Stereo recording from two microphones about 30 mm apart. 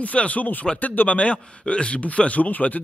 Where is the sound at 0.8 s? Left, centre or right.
Left.